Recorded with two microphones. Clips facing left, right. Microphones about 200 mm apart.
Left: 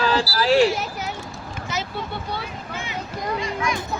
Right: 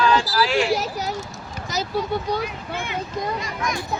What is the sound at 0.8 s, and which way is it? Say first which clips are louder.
A child's voice: right 3 dB; 35° right (ahead or behind).